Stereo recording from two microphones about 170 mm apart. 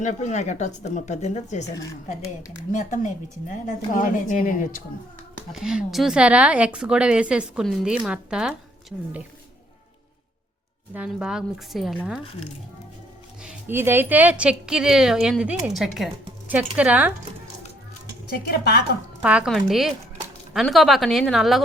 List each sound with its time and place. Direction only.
0.0 s speech: 45° left (ahead or behind)
2.7 s speech: 45° left (ahead or behind)
5.5 s speech: 5° right (ahead or behind)
10.9 s speech: 5° right (ahead or behind)
13.4 s speech: 10° right (ahead or behind)
18.4 s a woman's voice: 65° left (ahead or behind)
19.2 s speech: 5° right (ahead or behind)